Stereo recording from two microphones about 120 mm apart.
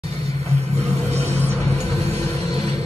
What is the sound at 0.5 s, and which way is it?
Vehicle, 60° right (ahead or behind).